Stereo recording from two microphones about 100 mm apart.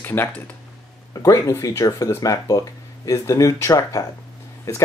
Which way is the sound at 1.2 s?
35° left (ahead or behind).